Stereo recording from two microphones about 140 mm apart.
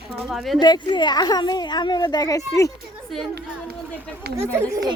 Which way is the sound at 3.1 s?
Centre (ahead or behind).